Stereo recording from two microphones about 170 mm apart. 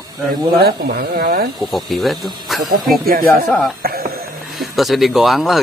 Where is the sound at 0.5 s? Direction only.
70° right (ahead or behind).